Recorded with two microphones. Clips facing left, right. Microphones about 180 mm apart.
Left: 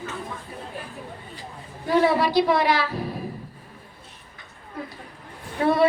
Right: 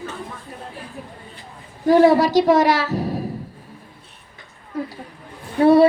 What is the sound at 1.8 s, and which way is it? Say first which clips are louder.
A woman's voice: right 7 dB; 40° right (ahead or behind).